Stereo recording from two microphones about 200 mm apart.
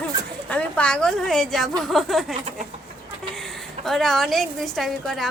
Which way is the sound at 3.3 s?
Centre (ahead or behind).